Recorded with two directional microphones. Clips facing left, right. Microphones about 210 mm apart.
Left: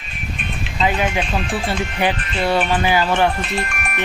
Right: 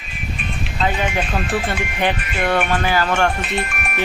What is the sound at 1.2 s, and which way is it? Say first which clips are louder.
Speech: right 1 dB; centre (ahead or behind).